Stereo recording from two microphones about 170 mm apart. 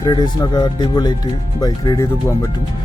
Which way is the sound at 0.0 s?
25° left (ahead or behind).